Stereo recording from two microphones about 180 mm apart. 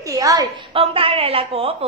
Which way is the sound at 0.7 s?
30° right (ahead or behind).